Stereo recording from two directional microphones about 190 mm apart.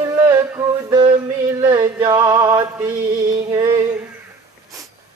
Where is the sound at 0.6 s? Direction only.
10° right (ahead or behind).